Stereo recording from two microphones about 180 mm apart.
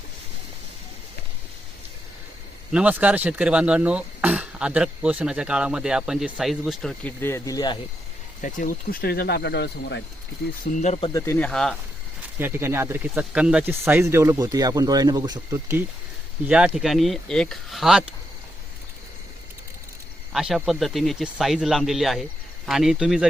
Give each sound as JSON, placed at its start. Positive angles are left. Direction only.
{"t": 2.7, "sound": "speech", "side_deg": -5}
{"t": 8.4, "sound": "speech", "side_deg": 45}
{"t": 10.8, "sound": "speech", "side_deg": 35}
{"t": 11.1, "sound": "speech", "side_deg": 10}
{"t": 12.4, "sound": "speech", "side_deg": -15}
{"t": 16.5, "sound": "speech", "side_deg": -5}
{"t": 20.3, "sound": "speech", "side_deg": -5}